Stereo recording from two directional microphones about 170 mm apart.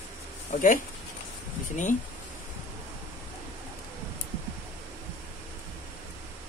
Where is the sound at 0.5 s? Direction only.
50° left (ahead or behind).